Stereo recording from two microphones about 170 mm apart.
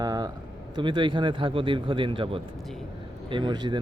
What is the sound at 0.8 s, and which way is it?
A man's voice, 30° right (ahead or behind).